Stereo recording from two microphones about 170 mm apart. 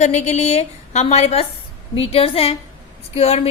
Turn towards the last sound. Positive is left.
turn(degrees=35)  # may be behind; listen again after turning